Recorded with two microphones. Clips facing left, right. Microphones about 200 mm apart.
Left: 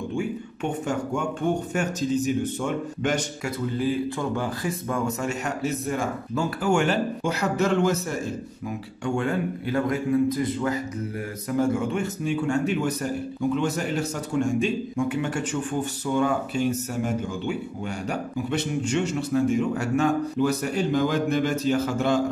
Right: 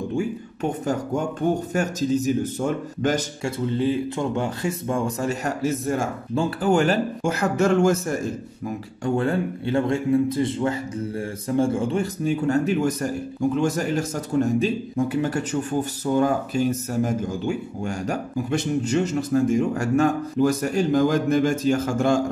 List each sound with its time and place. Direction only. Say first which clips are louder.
0.1 s a man's voice: right 2 dB; 40° right (ahead or behind)
3.7 s a man's voice: right 2 dB; 25° right (ahead or behind); by 8.2 s 45° right (ahead or behind)
9.0 s a man's voice: right 3 dB; 35° right (ahead or behind)